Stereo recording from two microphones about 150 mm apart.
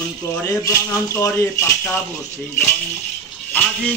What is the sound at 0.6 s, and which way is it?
Speech, 20° left (ahead or behind).